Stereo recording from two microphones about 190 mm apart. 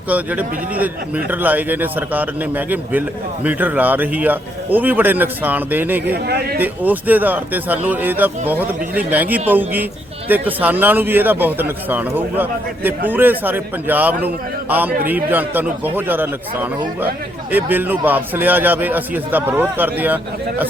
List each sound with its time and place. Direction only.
0.1 s a man's voice: 10° right (ahead or behind)
6.2 s a man's voice: 55° right (ahead or behind)
6.6 s a man's voice: 10° right (ahead or behind)